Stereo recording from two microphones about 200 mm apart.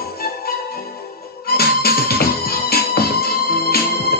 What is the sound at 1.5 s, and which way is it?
Music, 50° left (ahead or behind).